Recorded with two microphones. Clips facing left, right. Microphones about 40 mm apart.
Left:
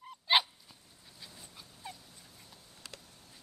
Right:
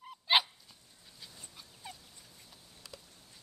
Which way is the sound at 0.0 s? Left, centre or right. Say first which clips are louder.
Even; centre.